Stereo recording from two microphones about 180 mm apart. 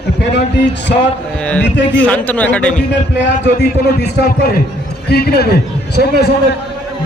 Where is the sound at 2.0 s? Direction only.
10° left (ahead or behind).